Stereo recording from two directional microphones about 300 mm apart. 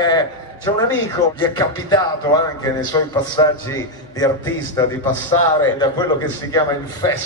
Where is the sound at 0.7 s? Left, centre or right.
Centre.